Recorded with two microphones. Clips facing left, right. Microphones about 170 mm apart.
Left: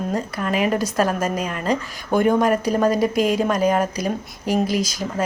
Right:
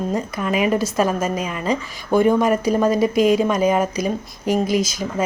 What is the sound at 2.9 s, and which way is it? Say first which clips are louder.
Speech: right 2 dB; 40° left (ahead or behind).